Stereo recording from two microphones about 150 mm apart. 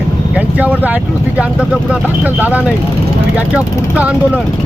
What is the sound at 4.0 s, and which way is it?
Speech, 10° right (ahead or behind).